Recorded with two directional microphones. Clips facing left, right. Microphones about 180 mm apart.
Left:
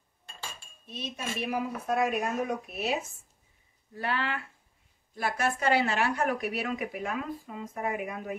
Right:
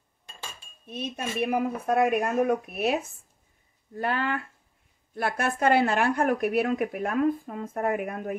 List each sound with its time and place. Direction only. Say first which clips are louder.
0.8 s a woman's voice: right 4 dB; 55° right (ahead or behind)